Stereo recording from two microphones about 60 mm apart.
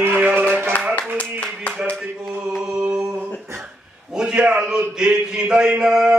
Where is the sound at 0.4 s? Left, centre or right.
Right.